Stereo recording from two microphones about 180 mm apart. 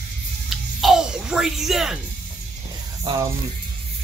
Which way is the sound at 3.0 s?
25° right (ahead or behind).